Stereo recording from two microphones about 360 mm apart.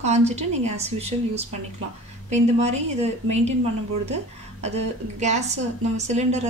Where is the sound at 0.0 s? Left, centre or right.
Centre.